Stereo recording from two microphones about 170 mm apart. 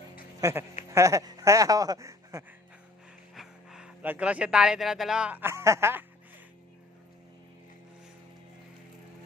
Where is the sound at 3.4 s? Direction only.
5° right (ahead or behind).